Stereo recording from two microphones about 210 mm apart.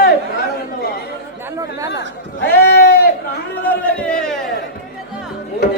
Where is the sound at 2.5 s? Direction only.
50° left (ahead or behind).